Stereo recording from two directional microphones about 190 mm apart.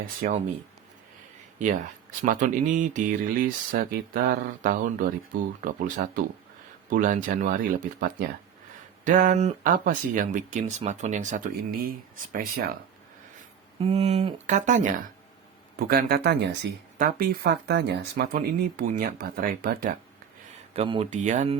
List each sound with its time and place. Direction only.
0.2 s speech: 45° right (ahead or behind)
1.5 s speech: 40° right (ahead or behind)
13.8 s speech: 35° right (ahead or behind)
15.8 s speech: 50° right (ahead or behind)
17.0 s speech: 50° right (ahead or behind)
20.7 s speech: 30° right (ahead or behind)
21.1 s speech: 40° right (ahead or behind)